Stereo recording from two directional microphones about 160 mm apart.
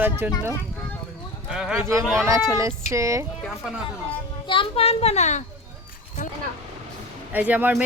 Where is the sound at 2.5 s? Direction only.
20° right (ahead or behind).